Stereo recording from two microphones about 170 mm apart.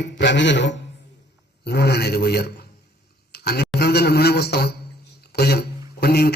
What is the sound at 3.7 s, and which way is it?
A man's voice, 70° left (ahead or behind).